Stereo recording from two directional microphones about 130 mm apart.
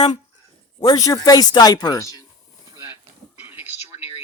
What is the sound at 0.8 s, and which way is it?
Speech, 30° left (ahead or behind).